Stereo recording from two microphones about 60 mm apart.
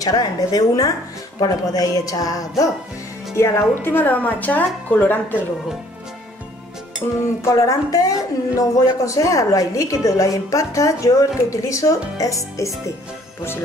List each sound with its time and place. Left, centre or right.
0.0 s a woman's voice: left
3.3 s speech: left
7.0 s music: left
7.4 s a woman's voice: left